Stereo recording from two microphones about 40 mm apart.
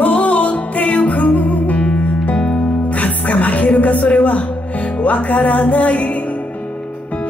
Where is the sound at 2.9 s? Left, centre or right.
Left.